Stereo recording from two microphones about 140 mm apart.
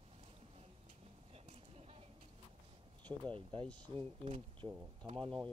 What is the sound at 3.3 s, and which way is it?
Speech, 40° right (ahead or behind).